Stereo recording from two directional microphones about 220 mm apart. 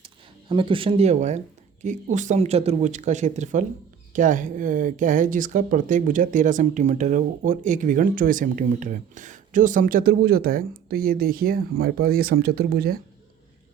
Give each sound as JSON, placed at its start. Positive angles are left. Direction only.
{"t": 0.0, "sound": "speech", "side_deg": -25}